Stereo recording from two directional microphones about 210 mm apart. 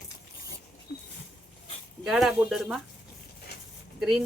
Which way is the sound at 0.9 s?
50° left (ahead or behind).